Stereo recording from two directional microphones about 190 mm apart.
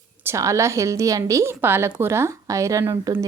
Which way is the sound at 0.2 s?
15° right (ahead or behind).